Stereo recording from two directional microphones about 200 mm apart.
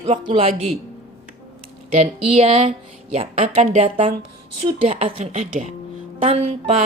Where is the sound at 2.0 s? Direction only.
30° right (ahead or behind).